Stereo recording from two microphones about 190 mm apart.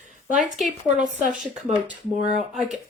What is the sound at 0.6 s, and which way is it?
Speech, 45° right (ahead or behind).